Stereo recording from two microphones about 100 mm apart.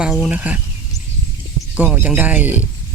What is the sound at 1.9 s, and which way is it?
Speech, 15° right (ahead or behind).